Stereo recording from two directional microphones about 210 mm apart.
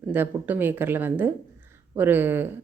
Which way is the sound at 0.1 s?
10° right (ahead or behind).